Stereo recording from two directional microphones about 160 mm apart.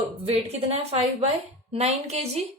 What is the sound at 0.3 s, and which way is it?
A woman's voice, 40° right (ahead or behind).